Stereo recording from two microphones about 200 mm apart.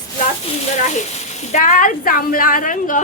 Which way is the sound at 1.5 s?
40° left (ahead or behind).